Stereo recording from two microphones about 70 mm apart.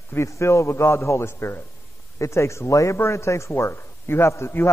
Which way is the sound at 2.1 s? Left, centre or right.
Left.